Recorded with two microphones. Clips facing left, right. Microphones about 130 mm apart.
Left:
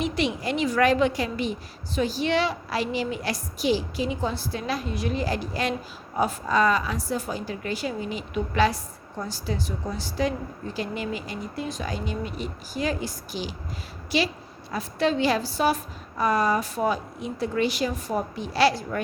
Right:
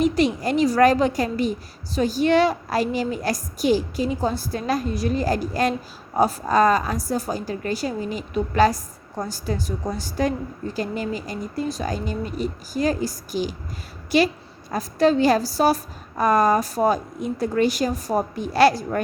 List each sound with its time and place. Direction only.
0.0 s a woman's voice: 40° right (ahead or behind)